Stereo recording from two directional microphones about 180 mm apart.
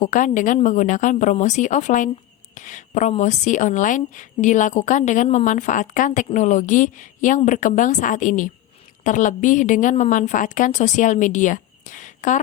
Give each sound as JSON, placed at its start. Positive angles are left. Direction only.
{"t": 0.0, "sound": "speech", "side_deg": 45}